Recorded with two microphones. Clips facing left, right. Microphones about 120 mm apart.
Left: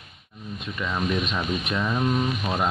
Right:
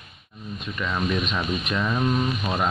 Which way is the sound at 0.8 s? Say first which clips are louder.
Even; 10° left (ahead or behind).